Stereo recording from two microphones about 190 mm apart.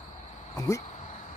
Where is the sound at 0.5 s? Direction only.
15° left (ahead or behind).